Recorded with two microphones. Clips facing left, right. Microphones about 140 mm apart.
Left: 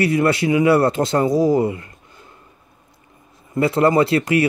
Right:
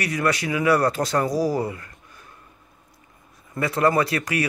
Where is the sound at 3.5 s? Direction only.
25° left (ahead or behind).